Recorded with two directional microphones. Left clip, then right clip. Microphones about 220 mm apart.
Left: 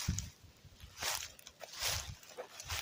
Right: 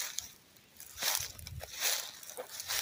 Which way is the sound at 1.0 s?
35° right (ahead or behind).